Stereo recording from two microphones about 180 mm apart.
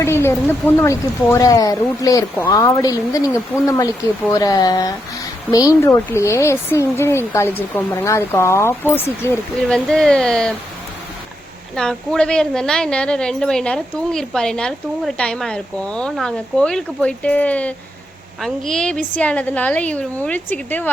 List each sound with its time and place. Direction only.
0.0 s speech: 15° left (ahead or behind)
11.8 s a woman's voice: 5° left (ahead or behind)